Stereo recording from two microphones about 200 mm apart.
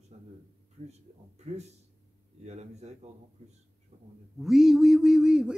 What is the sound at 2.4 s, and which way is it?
Speech, 35° right (ahead or behind).